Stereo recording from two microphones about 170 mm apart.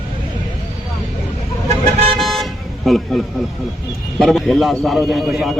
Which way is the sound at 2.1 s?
Centre (ahead or behind).